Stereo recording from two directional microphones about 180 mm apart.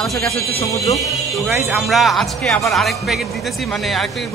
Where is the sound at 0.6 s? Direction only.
15° left (ahead or behind).